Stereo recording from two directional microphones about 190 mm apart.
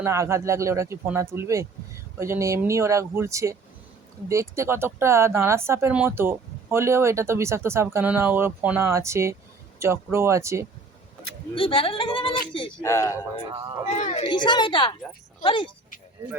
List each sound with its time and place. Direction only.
0.0 s speech: 15° right (ahead or behind)
11.5 s speech: 25° left (ahead or behind)
12.8 s speech: 15° left (ahead or behind)
13.9 s a woman's voice: 35° left (ahead or behind)
14.3 s speech: 25° left (ahead or behind)